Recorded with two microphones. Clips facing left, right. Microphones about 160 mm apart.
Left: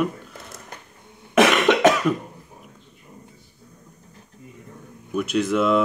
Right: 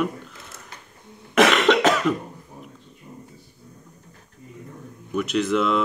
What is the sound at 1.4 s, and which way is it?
Cough, 10° left (ahead or behind).